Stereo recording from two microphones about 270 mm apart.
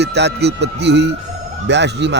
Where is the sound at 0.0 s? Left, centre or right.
Right.